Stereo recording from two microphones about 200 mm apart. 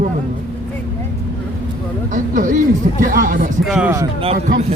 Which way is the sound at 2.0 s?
40° right (ahead or behind).